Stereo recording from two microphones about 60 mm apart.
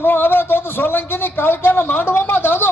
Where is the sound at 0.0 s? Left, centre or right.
Left.